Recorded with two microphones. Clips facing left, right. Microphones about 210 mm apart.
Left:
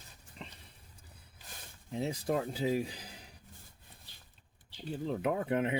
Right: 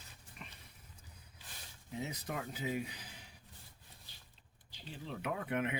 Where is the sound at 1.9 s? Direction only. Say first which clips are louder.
Left 9 dB; 30° left (ahead or behind).